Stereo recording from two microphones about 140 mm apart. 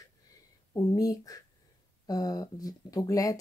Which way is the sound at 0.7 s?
25° left (ahead or behind).